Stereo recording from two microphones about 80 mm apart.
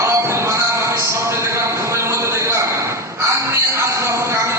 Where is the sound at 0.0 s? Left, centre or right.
Right.